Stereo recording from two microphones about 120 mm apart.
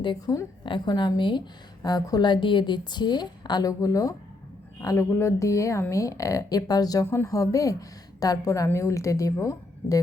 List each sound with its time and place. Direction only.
0.0 s a woman's voice: 40° left (ahead or behind)
7.0 s a woman's voice: 20° left (ahead or behind)